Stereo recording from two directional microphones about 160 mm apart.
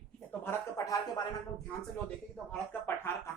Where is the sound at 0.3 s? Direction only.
15° left (ahead or behind).